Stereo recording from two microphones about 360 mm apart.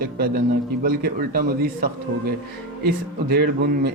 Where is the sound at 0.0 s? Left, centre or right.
Right.